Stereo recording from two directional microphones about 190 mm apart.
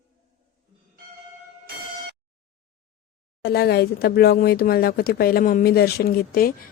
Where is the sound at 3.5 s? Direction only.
60° left (ahead or behind).